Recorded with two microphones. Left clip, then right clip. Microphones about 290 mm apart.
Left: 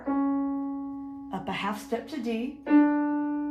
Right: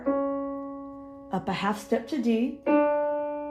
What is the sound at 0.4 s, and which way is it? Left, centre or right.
Music, right.